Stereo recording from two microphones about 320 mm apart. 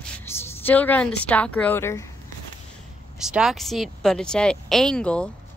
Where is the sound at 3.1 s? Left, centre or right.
Centre.